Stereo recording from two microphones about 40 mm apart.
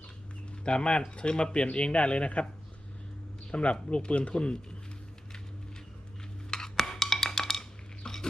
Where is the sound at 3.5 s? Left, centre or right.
Left.